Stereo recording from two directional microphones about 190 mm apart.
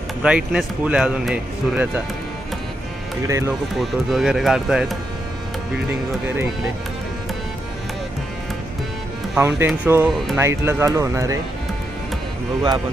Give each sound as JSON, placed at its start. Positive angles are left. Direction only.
{"t": 0.2, "sound": "speech", "side_deg": -5}
{"t": 3.2, "sound": "speech", "side_deg": -15}
{"t": 3.8, "sound": "speech", "side_deg": 0}
{"t": 6.2, "sound": "speech", "side_deg": -10}
{"t": 9.3, "sound": "speech", "side_deg": -10}
{"t": 10.3, "sound": "speech", "side_deg": -15}